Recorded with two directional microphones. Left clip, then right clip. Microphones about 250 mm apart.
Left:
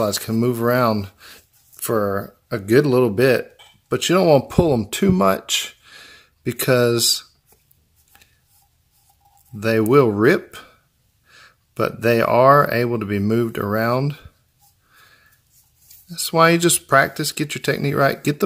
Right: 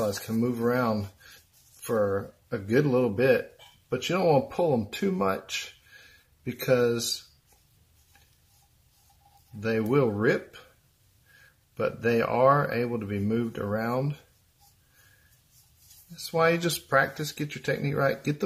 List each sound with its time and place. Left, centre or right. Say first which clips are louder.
0.0 s speech: left 8 dB; left
9.6 s speech: left 10 dB; left
11.7 s speech: left 8 dB; left
16.3 s speech: left 9 dB; left